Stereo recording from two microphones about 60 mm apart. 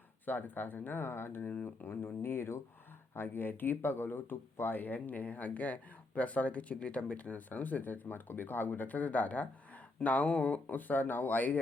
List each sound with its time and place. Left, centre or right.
0.3 s speech: left